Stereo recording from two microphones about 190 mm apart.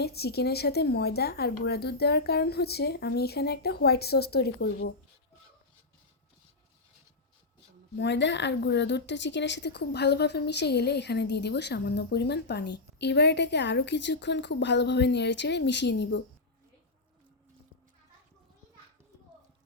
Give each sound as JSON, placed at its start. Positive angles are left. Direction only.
{"t": 0.0, "sound": "a woman's voice", "side_deg": 55}
{"t": 7.9, "sound": "a woman's voice", "side_deg": 65}